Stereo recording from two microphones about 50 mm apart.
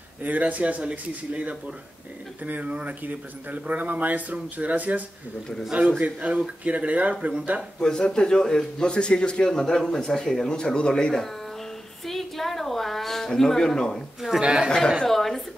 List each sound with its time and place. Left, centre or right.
0.2 s a man's voice: right
7.8 s a man's voice: centre
12.1 s a woman's voice: centre
14.4 s speech: centre
14.7 s speech: centre